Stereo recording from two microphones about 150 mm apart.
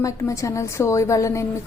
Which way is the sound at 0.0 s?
20° left (ahead or behind).